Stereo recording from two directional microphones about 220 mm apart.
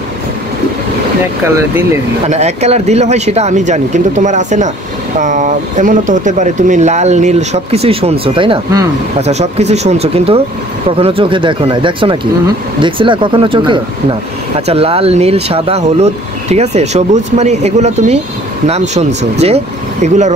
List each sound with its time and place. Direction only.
1.4 s speech: 10° right (ahead or behind)
2.2 s speech: 30° right (ahead or behind)